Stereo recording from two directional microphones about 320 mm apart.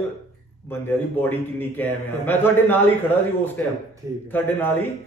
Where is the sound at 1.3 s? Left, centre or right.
Centre.